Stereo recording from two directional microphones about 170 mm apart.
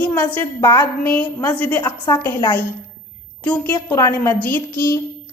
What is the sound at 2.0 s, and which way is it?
Speech, 20° left (ahead or behind).